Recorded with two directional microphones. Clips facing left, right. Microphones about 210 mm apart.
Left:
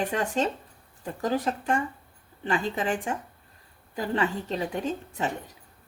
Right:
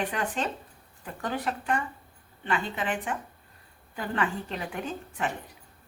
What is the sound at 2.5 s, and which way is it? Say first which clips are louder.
A woman's voice: left 3 dB; 30° left (ahead or behind).